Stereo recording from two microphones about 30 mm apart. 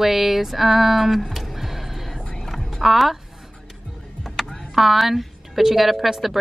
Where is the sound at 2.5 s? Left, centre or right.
Centre.